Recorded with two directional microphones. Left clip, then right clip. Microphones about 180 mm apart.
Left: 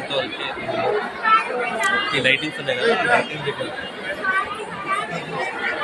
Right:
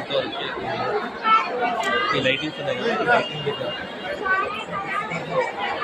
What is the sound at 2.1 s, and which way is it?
Speech, 5° left (ahead or behind).